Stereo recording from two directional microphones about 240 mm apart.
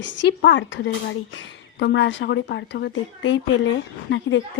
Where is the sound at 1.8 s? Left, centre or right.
Left.